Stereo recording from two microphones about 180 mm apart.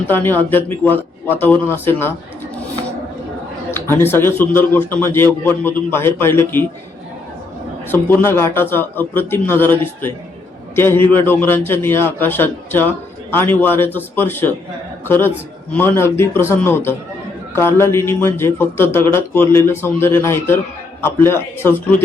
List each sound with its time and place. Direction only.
0.1 s a man's voice: 10° left (ahead or behind)
3.7 s a man's voice: 15° left (ahead or behind)
7.9 s a man's voice: 10° left (ahead or behind)